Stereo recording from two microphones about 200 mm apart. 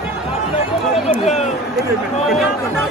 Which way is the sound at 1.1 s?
35° left (ahead or behind).